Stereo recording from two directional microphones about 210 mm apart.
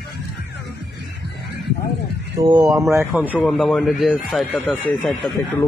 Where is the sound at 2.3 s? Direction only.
20° right (ahead or behind).